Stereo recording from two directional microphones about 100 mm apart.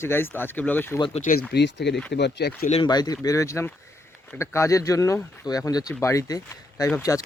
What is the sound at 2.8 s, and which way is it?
Speech, 45° left (ahead or behind).